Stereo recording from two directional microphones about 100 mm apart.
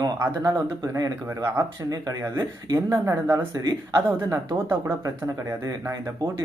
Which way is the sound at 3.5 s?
35° right (ahead or behind).